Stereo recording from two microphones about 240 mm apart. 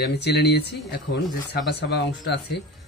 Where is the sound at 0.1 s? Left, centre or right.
Left.